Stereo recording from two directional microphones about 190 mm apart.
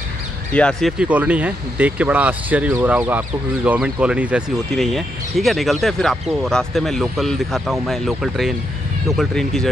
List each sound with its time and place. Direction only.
0.5 s speech: 5° left (ahead or behind)